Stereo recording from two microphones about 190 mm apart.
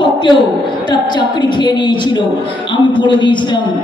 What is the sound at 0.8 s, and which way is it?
A man's voice, 25° left (ahead or behind).